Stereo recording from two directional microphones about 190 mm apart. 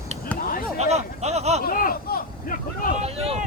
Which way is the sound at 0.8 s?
35° right (ahead or behind).